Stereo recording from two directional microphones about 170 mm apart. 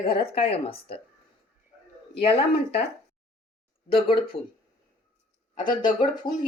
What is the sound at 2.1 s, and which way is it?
Speech, 35° left (ahead or behind).